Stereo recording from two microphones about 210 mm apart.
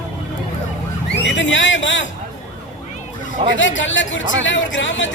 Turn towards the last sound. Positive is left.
turn(degrees=60)  # may be behind; listen again after turning